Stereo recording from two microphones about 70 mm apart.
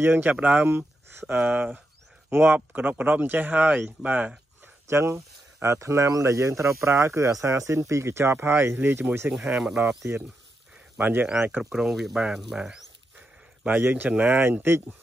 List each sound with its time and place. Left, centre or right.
0.0 s speech: right
4.8 s speech: right
9.3 s speech: centre
11.3 s speech: centre
13.7 s speech: right